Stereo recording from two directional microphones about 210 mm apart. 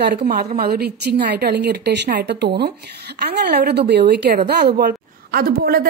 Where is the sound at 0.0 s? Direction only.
55° right (ahead or behind).